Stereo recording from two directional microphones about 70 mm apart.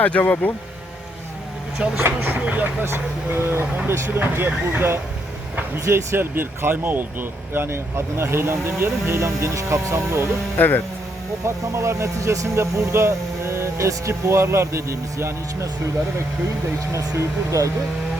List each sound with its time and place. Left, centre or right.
0.0 s speech: left
2.0 s speech: right
2.8 s speech: right
10.6 s speech: left
11.4 s speech: right
16.9 s speech: right